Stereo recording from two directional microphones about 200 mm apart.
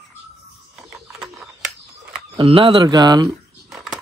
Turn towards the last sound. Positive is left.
turn(degrees=-20)  # may be behind; listen again after turning